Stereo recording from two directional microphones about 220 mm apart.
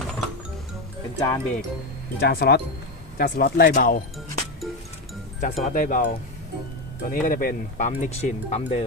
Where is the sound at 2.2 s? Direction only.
45° left (ahead or behind).